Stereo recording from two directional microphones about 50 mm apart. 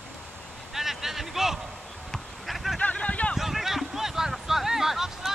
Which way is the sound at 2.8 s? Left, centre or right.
Left.